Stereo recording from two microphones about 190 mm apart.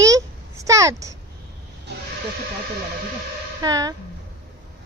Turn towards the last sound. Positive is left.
turn(degrees=-20)  # may be behind; listen again after turning